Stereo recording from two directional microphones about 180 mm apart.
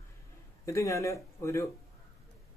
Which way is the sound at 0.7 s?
15° left (ahead or behind).